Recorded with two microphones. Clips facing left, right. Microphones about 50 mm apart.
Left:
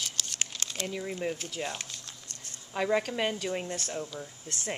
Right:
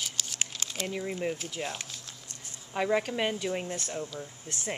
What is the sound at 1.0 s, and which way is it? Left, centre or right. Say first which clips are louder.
Speech: right 1 dB; centre.